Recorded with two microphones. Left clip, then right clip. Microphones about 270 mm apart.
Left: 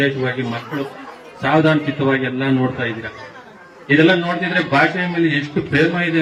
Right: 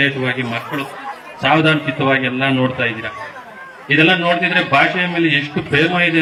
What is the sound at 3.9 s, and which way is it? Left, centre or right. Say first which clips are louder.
A man's voice: right 1 dB; centre.